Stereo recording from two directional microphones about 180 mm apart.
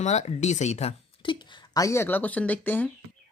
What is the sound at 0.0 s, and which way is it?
Speech, 40° left (ahead or behind).